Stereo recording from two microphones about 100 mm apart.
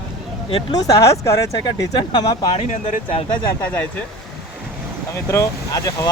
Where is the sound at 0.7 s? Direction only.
35° left (ahead or behind).